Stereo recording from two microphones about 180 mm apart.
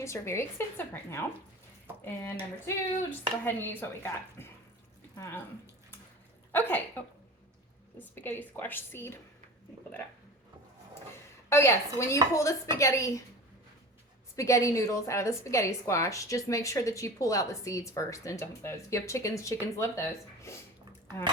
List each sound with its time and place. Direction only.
0.0 s a woman's voice: 15° left (ahead or behind)
2.6 s a woman's voice: 10° left (ahead or behind)
6.5 s speech: 10° left (ahead or behind)
7.9 s a woman's voice: 10° left (ahead or behind)
11.4 s a woman's voice: 15° left (ahead or behind)
14.3 s a woman's voice: 15° left (ahead or behind)